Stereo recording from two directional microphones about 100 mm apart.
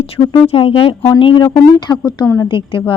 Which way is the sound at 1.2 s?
55° left (ahead or behind).